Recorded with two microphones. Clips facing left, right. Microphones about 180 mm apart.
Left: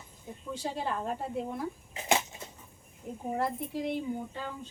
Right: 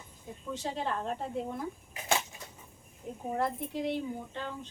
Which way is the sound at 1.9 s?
20° left (ahead or behind).